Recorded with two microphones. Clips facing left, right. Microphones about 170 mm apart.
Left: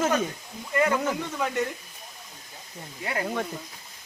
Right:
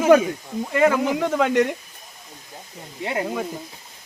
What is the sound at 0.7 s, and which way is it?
Speech, 90° right.